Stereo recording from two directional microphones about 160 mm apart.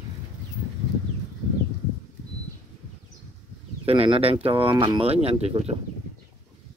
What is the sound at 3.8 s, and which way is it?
Speech, 35° right (ahead or behind).